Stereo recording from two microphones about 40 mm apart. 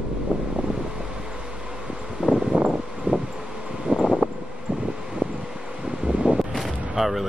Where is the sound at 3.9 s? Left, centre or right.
Right.